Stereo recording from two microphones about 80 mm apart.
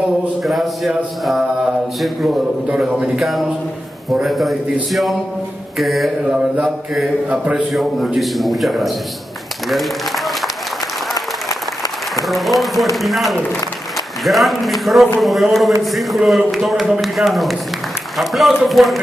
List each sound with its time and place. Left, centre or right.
0.4 s mantra: centre
5.8 s mantra: centre
6.2 s mantra: centre
7.7 s mantra: centre
9.7 s applause: centre
11.1 s applause: left
12.3 s mantra: centre